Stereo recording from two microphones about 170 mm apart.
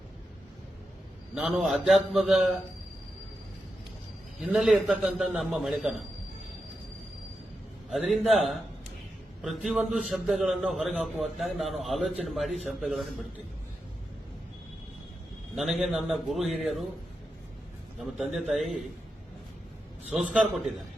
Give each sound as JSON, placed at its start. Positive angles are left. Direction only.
{"t": 1.4, "sound": "a man's voice", "side_deg": -5}
{"t": 4.4, "sound": "a man's voice", "side_deg": -5}
{"t": 7.9, "sound": "a man's voice", "side_deg": 0}
{"t": 15.5, "sound": "a man's voice", "side_deg": 0}
{"t": 18.0, "sound": "a man's voice", "side_deg": 0}
{"t": 20.1, "sound": "a man's voice", "side_deg": 0}